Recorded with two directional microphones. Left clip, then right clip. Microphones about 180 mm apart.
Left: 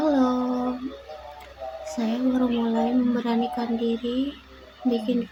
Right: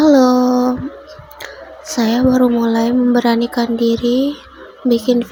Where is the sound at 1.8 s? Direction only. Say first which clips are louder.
Right 12 dB; 35° right (ahead or behind).